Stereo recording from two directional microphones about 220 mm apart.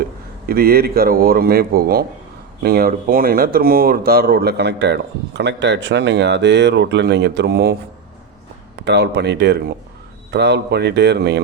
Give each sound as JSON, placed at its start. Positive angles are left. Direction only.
{"t": 0.4, "sound": "speech", "side_deg": -45}
{"t": 8.8, "sound": "speech", "side_deg": -50}